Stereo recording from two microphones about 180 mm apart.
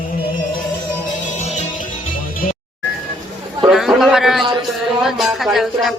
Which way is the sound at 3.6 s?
Centre (ahead or behind).